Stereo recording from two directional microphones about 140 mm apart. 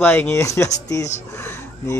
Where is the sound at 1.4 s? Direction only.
15° left (ahead or behind).